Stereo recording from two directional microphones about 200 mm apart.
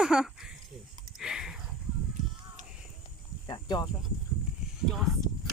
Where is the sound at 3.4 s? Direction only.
20° left (ahead or behind).